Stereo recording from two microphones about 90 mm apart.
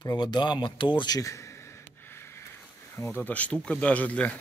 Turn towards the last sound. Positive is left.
turn(degrees=15)  # may be behind; listen again after turning